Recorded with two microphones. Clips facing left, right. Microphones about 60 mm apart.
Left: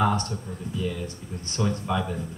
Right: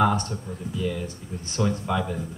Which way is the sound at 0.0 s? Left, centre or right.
Right.